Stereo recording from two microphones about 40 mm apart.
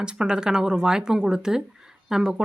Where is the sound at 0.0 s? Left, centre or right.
Right.